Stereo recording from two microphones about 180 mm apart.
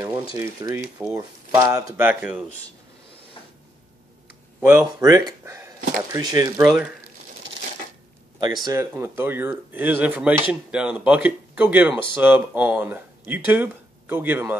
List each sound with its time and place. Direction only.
0.4 s speech: 20° right (ahead or behind)
4.6 s speech: 15° right (ahead or behind)
8.6 s speech: 15° right (ahead or behind)